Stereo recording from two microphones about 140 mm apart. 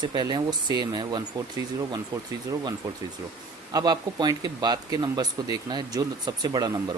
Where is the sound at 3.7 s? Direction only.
30° right (ahead or behind).